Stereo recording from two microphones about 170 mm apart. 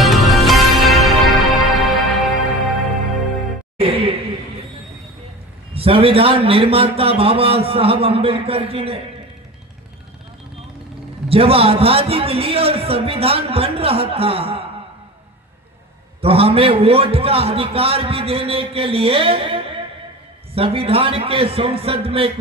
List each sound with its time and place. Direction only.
0.0 s music: centre (ahead or behind)
3.8 s a sound: 35° right (ahead or behind)
5.8 s a man's voice: 30° right (ahead or behind)
11.2 s a man's voice: 35° right (ahead or behind)
16.2 s a man's voice: 35° right (ahead or behind)